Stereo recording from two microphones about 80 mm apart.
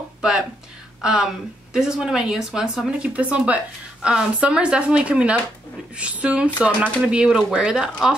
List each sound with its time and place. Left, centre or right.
0.2 s speech: centre